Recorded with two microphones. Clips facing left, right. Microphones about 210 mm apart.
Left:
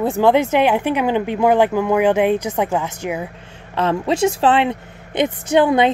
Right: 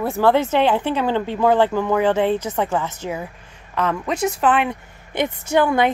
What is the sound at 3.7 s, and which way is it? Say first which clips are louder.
A woman's voice: left 4 dB; 30° left (ahead or behind).